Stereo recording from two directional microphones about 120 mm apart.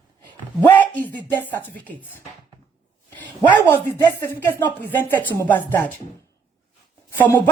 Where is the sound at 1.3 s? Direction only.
15° left (ahead or behind).